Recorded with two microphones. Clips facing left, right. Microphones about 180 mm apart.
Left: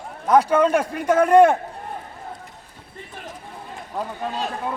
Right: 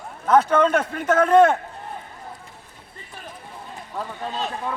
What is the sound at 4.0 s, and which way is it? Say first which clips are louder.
Speech: left 2 dB; 15° left (ahead or behind).